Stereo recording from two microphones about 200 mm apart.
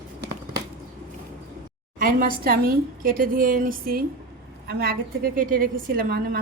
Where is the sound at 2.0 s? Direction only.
45° right (ahead or behind).